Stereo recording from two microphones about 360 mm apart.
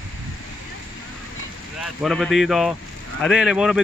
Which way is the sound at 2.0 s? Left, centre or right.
Centre.